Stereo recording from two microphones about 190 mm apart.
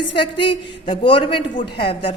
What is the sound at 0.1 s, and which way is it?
A woman's voice, 25° left (ahead or behind).